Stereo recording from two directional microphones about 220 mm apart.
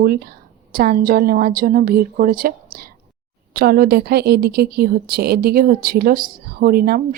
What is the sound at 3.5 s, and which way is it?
A woman's voice, 45° right (ahead or behind).